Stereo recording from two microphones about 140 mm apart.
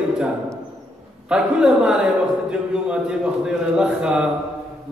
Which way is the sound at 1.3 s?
5° right (ahead or behind).